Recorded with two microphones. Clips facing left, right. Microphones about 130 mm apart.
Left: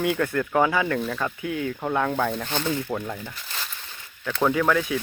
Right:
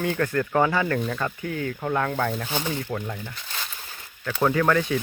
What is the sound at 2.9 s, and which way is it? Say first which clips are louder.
Speech: left 1 dB; 5° left (ahead or behind).